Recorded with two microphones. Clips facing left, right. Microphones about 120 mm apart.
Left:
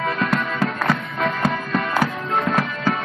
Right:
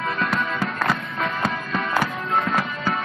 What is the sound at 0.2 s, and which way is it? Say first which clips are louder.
Music: left 2 dB; centre (ahead or behind).